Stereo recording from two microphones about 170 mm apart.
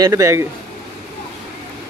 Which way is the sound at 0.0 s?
20° right (ahead or behind).